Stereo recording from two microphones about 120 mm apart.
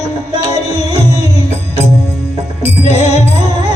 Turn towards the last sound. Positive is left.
turn(degrees=65)  # may be behind; listen again after turning